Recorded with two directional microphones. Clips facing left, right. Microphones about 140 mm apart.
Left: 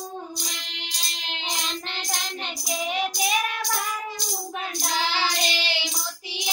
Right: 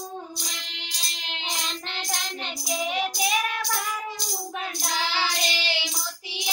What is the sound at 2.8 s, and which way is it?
Child singing, 5° right (ahead or behind).